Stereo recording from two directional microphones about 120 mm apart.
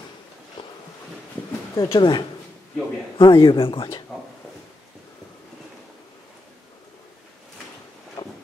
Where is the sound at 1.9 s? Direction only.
40° left (ahead or behind).